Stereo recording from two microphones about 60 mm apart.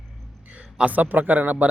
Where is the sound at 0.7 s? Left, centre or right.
Right.